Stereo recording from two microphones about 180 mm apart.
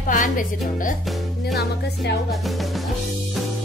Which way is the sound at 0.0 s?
45° left (ahead or behind).